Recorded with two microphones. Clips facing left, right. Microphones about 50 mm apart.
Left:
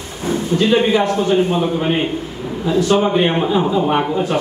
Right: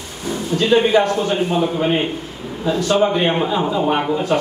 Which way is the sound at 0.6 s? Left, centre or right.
Centre.